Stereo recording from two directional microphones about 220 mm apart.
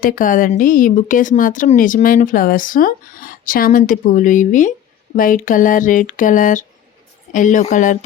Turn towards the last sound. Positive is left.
turn(degrees=35)  # may be behind; listen again after turning